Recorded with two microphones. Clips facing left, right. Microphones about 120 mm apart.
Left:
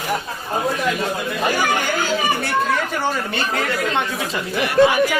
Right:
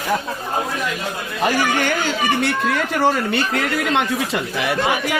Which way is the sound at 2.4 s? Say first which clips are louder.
Even; 90° right.